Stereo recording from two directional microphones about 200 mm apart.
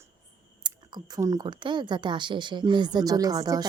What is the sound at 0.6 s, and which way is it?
Speech, 20° right (ahead or behind).